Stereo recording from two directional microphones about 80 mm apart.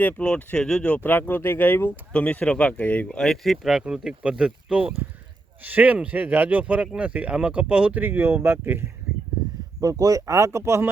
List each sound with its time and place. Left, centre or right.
0.0 s speech: centre
3.1 s speech: centre; by 8.8 s right
9.8 s speech: right